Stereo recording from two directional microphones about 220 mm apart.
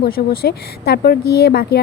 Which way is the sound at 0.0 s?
45° left (ahead or behind).